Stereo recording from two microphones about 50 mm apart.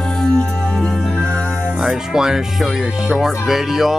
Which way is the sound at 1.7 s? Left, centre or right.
Centre.